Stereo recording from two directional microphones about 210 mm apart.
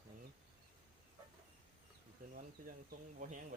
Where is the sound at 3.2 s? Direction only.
40° right (ahead or behind).